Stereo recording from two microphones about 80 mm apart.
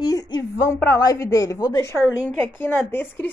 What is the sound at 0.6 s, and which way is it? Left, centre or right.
Speech, left.